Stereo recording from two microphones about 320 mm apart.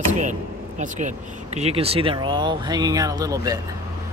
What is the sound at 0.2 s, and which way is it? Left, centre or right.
Speech, right.